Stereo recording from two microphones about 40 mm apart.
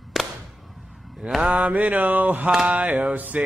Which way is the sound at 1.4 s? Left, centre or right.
Right.